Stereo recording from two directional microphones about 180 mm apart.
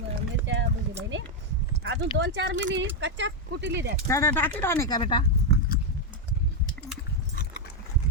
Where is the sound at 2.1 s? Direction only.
70° right (ahead or behind); by 2.8 s 90° right.